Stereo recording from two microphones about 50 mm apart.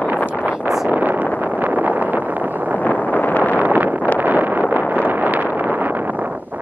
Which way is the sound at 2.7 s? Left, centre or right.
Left.